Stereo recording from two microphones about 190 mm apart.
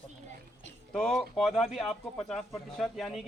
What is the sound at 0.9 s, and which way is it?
Speech, 5° left (ahead or behind).